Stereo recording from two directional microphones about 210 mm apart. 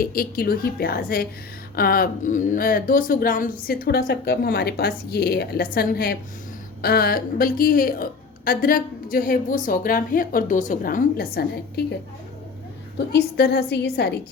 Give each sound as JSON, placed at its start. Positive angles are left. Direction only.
{"t": 0.0, "sound": "a woman's voice", "side_deg": 45}
{"t": 13.0, "sound": "a woman's voice", "side_deg": 50}